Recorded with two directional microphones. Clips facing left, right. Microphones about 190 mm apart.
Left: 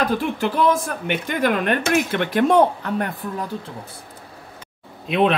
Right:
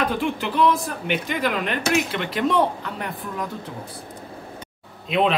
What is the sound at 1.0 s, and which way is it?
Speech, 50° left (ahead or behind).